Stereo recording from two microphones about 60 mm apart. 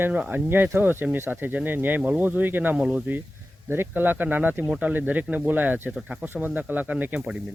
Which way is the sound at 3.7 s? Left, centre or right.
Right.